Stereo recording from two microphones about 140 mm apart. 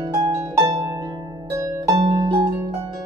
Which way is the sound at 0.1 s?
25° right (ahead or behind).